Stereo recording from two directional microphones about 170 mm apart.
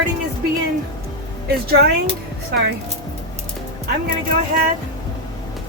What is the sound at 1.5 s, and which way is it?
Speech, 65° right (ahead or behind).